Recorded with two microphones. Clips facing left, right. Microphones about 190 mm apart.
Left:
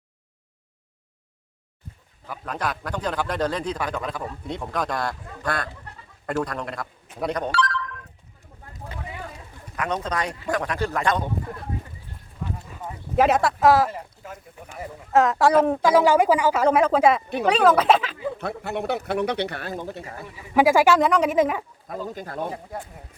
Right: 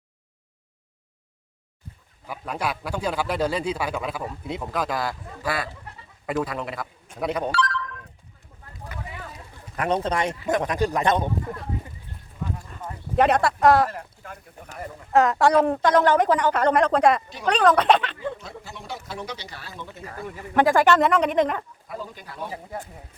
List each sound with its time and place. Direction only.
2.2 s a man's voice: 10° right (ahead or behind)
7.5 s telephone: 65° left (ahead or behind)
9.7 s speech: 30° right (ahead or behind)
12.6 s clip-clop: 5° left (ahead or behind)
14.8 s speech: centre (ahead or behind)
18.6 s speech: 65° left (ahead or behind); by 20.0 s 45° left (ahead or behind)
20.6 s speech: 5° left (ahead or behind)
21.8 s speech: 45° left (ahead or behind)